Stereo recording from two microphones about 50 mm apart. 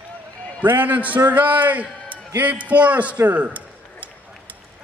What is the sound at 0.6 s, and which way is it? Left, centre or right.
A man's voice, right.